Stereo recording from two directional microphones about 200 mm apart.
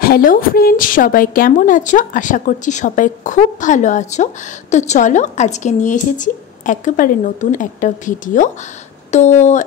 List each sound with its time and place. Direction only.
0.0 s speech: 45° left (ahead or behind)